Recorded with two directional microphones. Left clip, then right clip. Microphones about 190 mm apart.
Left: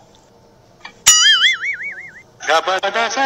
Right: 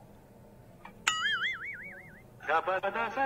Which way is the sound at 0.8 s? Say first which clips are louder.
Left 18 dB; 60° left (ahead or behind).